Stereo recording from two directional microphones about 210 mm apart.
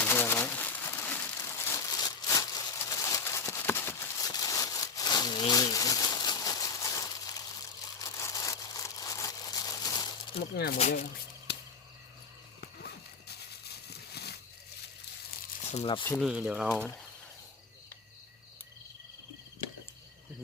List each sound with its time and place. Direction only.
0.0 s crumpling: 10° left (ahead or behind)
10.5 s speech: 50° left (ahead or behind)
10.8 s speech: 35° left (ahead or behind)
12.8 s horse: 50° left (ahead or behind)
13.9 s a sound: 50° left (ahead or behind)
15.7 s speech: 25° left (ahead or behind)
16.0 s speech: centre (ahead or behind)